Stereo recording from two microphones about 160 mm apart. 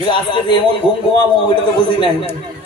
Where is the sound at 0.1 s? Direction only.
30° left (ahead or behind).